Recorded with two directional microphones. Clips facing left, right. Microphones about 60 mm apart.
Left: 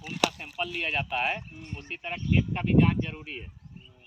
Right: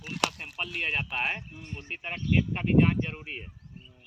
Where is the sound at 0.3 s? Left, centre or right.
Right.